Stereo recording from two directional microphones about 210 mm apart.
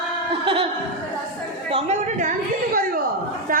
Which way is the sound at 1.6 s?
30° right (ahead or behind).